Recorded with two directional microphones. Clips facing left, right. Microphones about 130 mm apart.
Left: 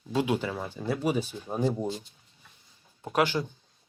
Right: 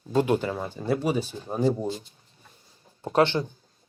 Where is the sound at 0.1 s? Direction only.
45° right (ahead or behind).